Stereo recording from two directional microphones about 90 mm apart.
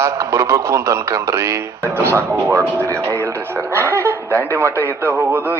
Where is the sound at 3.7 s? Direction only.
30° right (ahead or behind).